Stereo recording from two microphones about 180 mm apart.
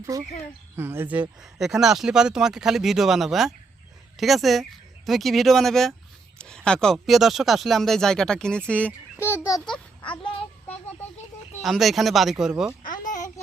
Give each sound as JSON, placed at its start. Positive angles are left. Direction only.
{"t": 0.0, "sound": "a child's voice", "side_deg": -15}
{"t": 11.6, "sound": "speech", "side_deg": 0}
{"t": 12.8, "sound": "a sound", "side_deg": 50}